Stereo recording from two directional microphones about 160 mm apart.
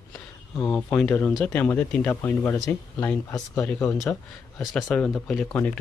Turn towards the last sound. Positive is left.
turn(degrees=10)  # may be behind; listen again after turning